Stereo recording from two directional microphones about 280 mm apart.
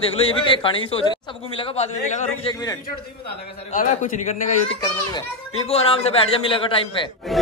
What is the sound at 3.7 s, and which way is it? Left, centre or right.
Speech, left.